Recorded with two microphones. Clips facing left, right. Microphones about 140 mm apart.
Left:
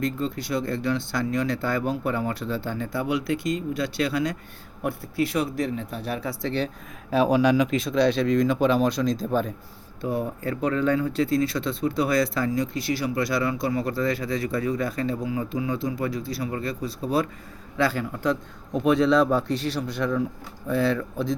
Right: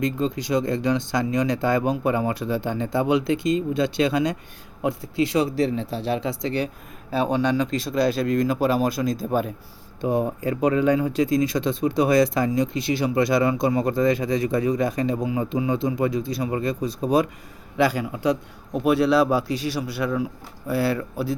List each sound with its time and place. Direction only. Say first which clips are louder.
0.0 s speech: right 3 dB; 20° right (ahead or behind)
7.1 s speech: left 2 dB; 5° left (ahead or behind)
10.0 s speech: right 4 dB; 20° right (ahead or behind)